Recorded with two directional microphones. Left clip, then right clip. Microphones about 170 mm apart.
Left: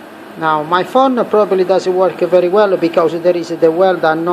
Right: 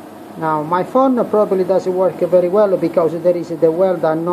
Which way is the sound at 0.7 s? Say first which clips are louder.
Left 2 dB; 5° left (ahead or behind).